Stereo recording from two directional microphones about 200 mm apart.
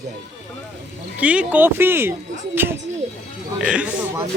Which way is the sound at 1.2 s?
5° right (ahead or behind).